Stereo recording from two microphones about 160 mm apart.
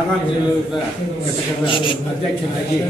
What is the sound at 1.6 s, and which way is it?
Speech, 30° left (ahead or behind).